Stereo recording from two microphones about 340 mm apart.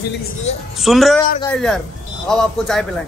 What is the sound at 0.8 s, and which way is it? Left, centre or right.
A man's voice, centre.